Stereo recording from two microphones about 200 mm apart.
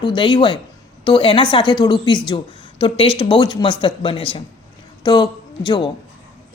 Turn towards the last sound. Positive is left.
turn(degrees=20)  # may be behind; listen again after turning